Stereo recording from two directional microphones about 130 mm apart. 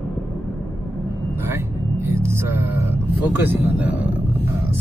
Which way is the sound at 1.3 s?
20° right (ahead or behind).